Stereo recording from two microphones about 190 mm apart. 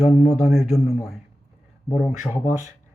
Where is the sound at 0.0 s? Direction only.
Centre (ahead or behind).